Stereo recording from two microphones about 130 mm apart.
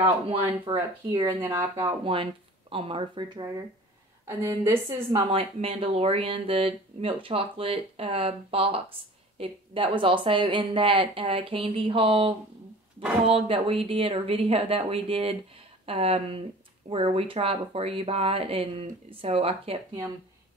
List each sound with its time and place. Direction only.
0.0 s speech: 45° right (ahead or behind)
4.3 s a woman's voice: 25° right (ahead or behind)
5.2 s speech: 45° right (ahead or behind)